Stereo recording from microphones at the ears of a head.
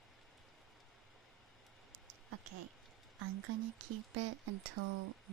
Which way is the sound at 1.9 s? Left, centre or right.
Right.